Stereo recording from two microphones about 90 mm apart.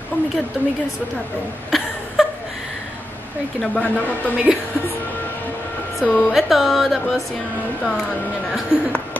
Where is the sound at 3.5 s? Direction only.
15° left (ahead or behind).